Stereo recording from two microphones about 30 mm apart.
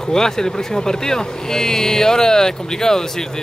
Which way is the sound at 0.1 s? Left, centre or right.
Left.